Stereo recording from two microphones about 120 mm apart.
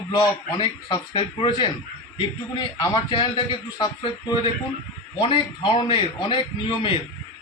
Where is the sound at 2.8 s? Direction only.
45° left (ahead or behind).